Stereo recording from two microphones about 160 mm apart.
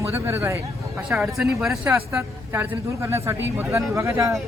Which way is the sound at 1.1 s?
Centre (ahead or behind).